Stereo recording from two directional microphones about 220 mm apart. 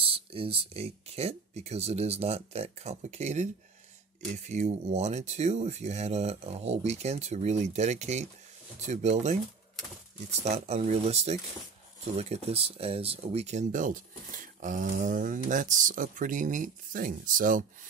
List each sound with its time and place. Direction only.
0.0 s speech: 25° right (ahead or behind)
10.4 s speech: 30° right (ahead or behind)